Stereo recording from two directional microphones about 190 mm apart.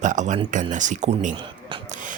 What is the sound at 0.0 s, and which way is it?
Speech, 40° right (ahead or behind).